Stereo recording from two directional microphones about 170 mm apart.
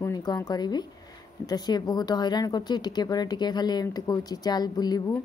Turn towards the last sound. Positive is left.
turn(degrees=25)  # may be behind; listen again after turning